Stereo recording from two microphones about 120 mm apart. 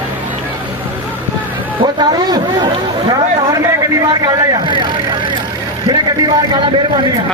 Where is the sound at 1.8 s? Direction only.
35° right (ahead or behind).